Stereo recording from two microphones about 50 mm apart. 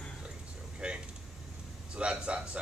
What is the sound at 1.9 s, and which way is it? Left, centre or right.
Speech, right.